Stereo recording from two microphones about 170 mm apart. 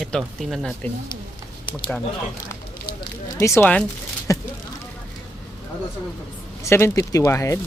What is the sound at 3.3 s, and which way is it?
Speech, 15° left (ahead or behind).